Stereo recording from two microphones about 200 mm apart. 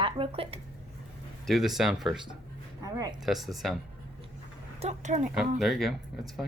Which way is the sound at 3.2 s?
Centre (ahead or behind).